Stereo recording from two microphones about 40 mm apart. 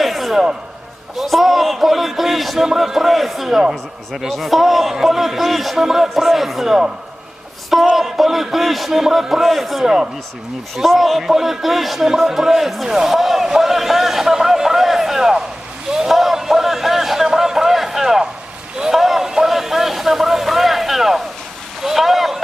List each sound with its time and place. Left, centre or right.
0.0 s a sound: centre
1.1 s a man's voice: centre
7.9 s a man's voice: centre
9.8 s a man's voice: centre
10.8 s a man's voice: centre
15.9 s a sound: centre